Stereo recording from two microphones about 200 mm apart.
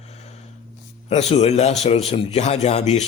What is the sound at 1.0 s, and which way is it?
Speech, 35° left (ahead or behind).